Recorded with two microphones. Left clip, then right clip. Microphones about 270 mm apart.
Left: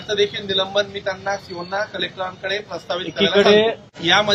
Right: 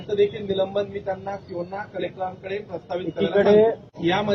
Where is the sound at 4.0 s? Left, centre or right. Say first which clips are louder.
Left 7 dB; centre.